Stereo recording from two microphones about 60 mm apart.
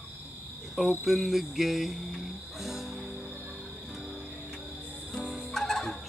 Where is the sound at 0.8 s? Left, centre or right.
Centre.